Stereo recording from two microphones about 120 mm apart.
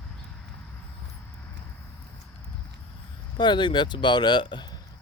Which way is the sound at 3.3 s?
40° left (ahead or behind).